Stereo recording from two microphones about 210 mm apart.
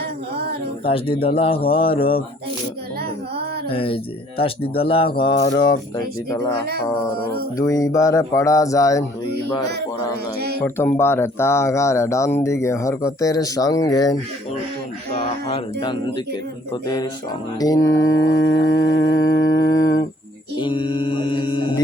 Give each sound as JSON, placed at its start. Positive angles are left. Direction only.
{"t": 0.9, "sound": "speech", "side_deg": 25}
{"t": 3.7, "sound": "speech", "side_deg": 25}
{"t": 6.7, "sound": "speech", "side_deg": -45}
{"t": 7.5, "sound": "speech", "side_deg": 15}
{"t": 10.6, "sound": "speech", "side_deg": 10}
{"t": 15.2, "sound": "a sound", "side_deg": 25}
{"t": 16.8, "sound": "speech", "side_deg": 20}
{"t": 18.1, "sound": "a sound", "side_deg": 70}
{"t": 19.4, "sound": "mantra", "side_deg": 65}
{"t": 20.6, "sound": "speech", "side_deg": 20}